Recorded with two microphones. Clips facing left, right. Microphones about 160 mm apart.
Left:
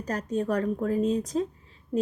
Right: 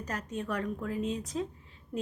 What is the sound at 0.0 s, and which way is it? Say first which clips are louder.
Speech: left 8 dB; 35° left (ahead or behind).